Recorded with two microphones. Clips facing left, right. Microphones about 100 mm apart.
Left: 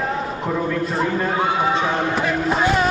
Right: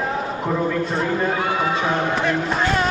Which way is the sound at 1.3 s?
25° left (ahead or behind).